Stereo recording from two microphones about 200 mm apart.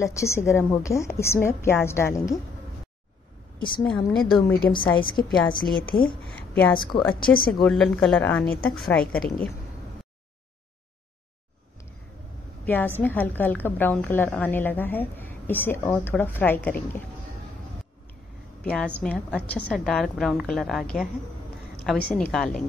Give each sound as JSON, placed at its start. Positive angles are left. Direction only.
{"t": 0.0, "sound": "a woman's voice", "side_deg": 15}
{"t": 3.5, "sound": "a woman's voice", "side_deg": 25}
{"t": 3.8, "sound": "speech", "side_deg": 5}
{"t": 4.9, "sound": "a woman's voice", "side_deg": 25}
{"t": 6.2, "sound": "a woman's voice", "side_deg": 10}
{"t": 6.7, "sound": "a woman's voice", "side_deg": 20}
{"t": 7.6, "sound": "speech", "side_deg": 5}
{"t": 12.6, "sound": "a woman's voice", "side_deg": 10}
{"t": 18.6, "sound": "a woman's voice", "side_deg": 5}